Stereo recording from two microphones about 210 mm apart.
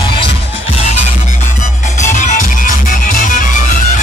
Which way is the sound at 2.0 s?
35° left (ahead or behind).